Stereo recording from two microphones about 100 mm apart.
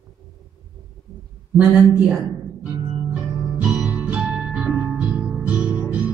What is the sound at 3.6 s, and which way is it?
Music, 15° right (ahead or behind).